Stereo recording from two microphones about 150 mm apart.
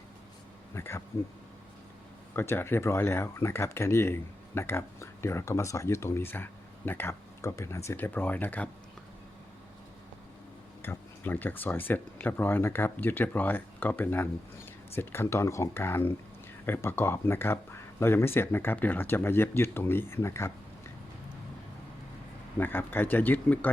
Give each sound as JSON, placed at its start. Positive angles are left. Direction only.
{"t": 0.7, "sound": "speech", "side_deg": 15}
{"t": 2.3, "sound": "speech", "side_deg": 15}
{"t": 10.8, "sound": "speech", "side_deg": 15}
{"t": 22.5, "sound": "speech", "side_deg": 15}